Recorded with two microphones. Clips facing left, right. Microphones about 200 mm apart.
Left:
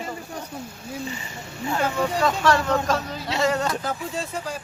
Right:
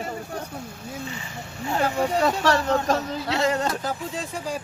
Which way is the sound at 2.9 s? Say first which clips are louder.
Right 1 dB; 20° right (ahead or behind).